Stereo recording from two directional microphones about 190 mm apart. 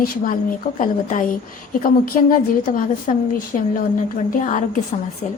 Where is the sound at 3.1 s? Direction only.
40° left (ahead or behind).